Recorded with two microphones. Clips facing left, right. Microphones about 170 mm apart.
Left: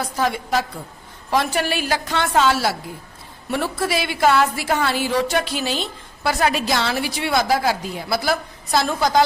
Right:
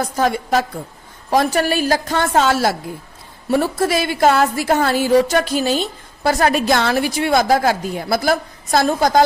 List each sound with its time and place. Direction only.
0.0 s a woman's voice: 45° right (ahead or behind)